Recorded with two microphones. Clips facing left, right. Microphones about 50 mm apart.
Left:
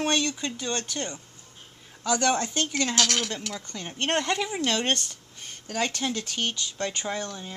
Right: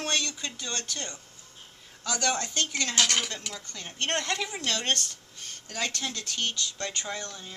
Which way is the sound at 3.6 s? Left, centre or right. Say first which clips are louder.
Left 3 dB; left.